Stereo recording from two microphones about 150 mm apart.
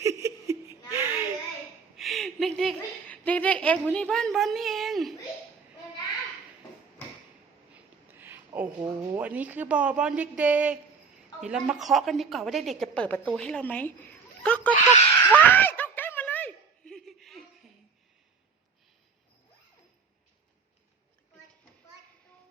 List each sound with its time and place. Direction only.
0.0 s laughter: 20° right (ahead or behind)
0.9 s a sound: 15° right (ahead or behind)
2.0 s a woman's voice: centre (ahead or behind)
7.7 s a woman's voice: 15° right (ahead or behind); by 14.7 s 10° left (ahead or behind)
15.2 s snicker: 15° left (ahead or behind)